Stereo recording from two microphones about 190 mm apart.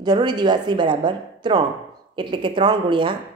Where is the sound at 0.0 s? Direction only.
20° right (ahead or behind).